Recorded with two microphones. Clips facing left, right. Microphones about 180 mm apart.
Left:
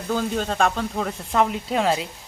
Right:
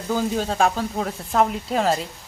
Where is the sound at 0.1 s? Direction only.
5° right (ahead or behind).